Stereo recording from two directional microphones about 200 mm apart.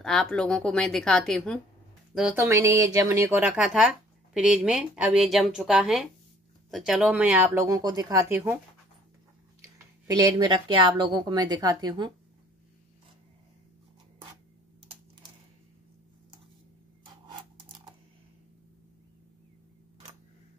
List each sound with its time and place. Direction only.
0.0 s speech: centre (ahead or behind)
2.1 s speech: 10° right (ahead or behind)
9.6 s speech: 20° right (ahead or behind)
17.6 s a sound: 25° right (ahead or behind)